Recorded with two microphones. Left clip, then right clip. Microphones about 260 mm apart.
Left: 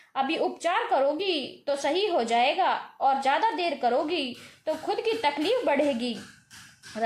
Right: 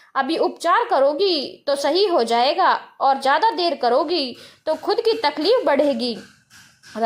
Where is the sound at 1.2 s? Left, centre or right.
Centre.